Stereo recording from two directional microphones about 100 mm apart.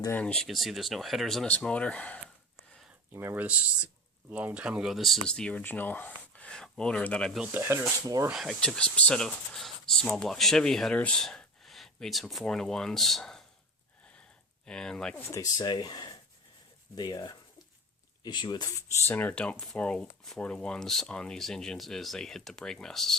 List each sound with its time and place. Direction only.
0.1 s speech: 10° left (ahead or behind)
0.4 s speech: centre (ahead or behind)
1.5 s speech: 15° left (ahead or behind)
3.1 s speech: 20° right (ahead or behind); by 7.3 s 10° left (ahead or behind)
7.5 s speech: 25° right (ahead or behind)
8.0 s speech: 35° right (ahead or behind)
8.3 s speech: centre (ahead or behind)
14.7 s speech: 5° left (ahead or behind)
15.1 s speech: 30° left (ahead or behind); by 18.7 s 50° left (ahead or behind)
18.8 s speech: 20° left (ahead or behind); by 23.1 s 5° left (ahead or behind)